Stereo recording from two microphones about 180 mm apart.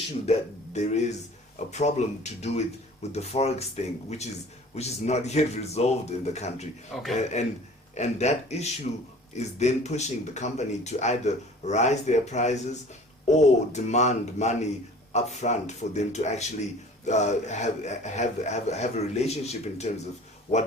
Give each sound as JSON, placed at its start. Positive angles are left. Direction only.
{"t": 0.3, "sound": "speech", "side_deg": 40}
{"t": 6.9, "sound": "a man's voice", "side_deg": 0}
{"t": 7.4, "sound": "speech", "side_deg": 40}